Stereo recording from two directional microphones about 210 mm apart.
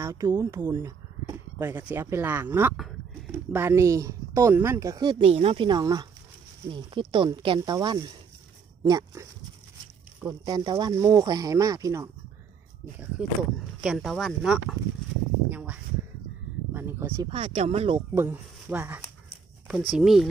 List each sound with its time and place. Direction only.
0.0 s speech: 15° right (ahead or behind)
13.2 s speech: 5° right (ahead or behind)
15.5 s a sound: 5° right (ahead or behind)
17.3 s speech: 25° right (ahead or behind)
17.9 s speech: 10° right (ahead or behind)